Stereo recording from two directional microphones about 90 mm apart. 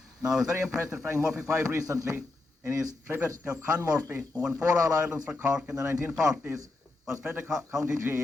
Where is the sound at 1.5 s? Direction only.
35° right (ahead or behind).